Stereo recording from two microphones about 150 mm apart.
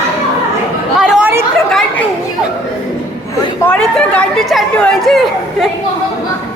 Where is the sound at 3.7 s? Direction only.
10° left (ahead or behind).